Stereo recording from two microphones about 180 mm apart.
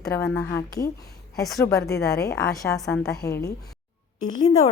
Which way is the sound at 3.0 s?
20° left (ahead or behind).